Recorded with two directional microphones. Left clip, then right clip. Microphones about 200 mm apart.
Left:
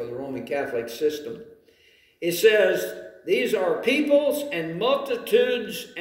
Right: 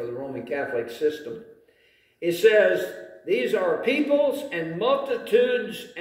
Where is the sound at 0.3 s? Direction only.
15° left (ahead or behind).